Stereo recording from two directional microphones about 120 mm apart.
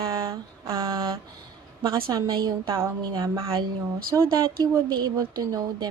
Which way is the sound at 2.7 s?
25° right (ahead or behind).